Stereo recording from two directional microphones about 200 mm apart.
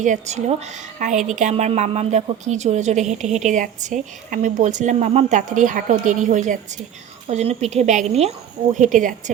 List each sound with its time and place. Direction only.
0.0 s a woman's voice: 35° right (ahead or behind)